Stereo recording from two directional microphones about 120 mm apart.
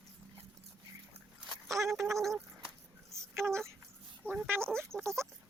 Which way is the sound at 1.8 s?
25° right (ahead or behind).